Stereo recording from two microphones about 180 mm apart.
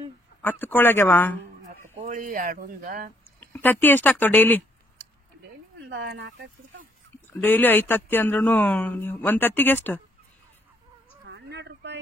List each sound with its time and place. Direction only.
0.4 s speech: 10° left (ahead or behind)
2.0 s speech: 45° right (ahead or behind)
3.3 s speech: 10° left (ahead or behind)
5.8 s speech: 80° right
7.3 s speech: 10° left (ahead or behind)
11.2 s a sound: 75° right (ahead or behind)